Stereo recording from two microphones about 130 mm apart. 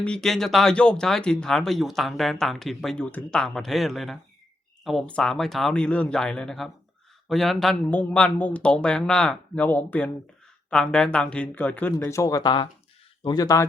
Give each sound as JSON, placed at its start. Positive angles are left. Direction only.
{"t": 0.0, "sound": "speech", "side_deg": 5}